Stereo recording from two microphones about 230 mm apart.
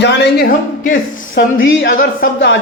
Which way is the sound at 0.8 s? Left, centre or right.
Left.